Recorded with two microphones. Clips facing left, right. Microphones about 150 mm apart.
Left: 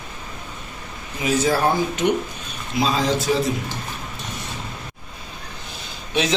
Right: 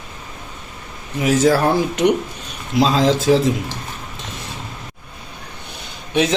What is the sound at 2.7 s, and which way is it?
Speech, 90° right.